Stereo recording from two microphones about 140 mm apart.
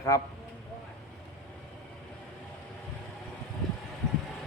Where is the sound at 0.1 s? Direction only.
25° left (ahead or behind).